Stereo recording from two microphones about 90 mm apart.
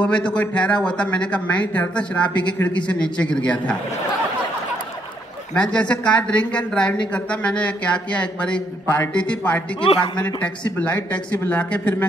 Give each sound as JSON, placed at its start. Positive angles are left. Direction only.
{"t": 0.0, "sound": "a woman's voice", "side_deg": 10}
{"t": 5.5, "sound": "a woman's voice", "side_deg": 10}
{"t": 9.8, "sound": "speech", "side_deg": 80}
{"t": 10.2, "sound": "a woman's voice", "side_deg": 15}